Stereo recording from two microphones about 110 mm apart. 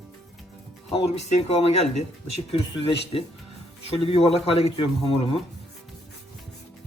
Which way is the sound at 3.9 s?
60° left (ahead or behind).